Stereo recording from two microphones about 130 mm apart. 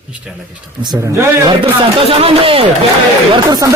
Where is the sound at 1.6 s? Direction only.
45° right (ahead or behind).